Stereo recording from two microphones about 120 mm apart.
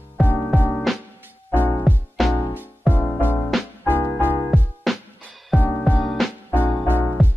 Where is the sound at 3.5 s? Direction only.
Centre (ahead or behind).